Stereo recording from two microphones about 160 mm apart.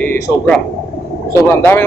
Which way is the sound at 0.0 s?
10° left (ahead or behind).